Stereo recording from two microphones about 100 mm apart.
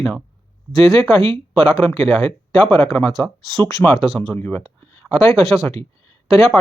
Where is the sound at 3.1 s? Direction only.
Centre (ahead or behind).